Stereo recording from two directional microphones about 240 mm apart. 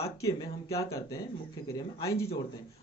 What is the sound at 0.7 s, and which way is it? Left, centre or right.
Speech, centre.